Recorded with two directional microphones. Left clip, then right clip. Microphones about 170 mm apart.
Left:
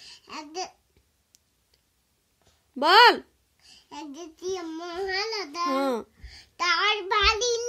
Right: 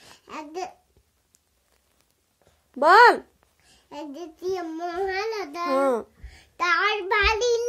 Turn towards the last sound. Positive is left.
turn(degrees=10)  # may be behind; listen again after turning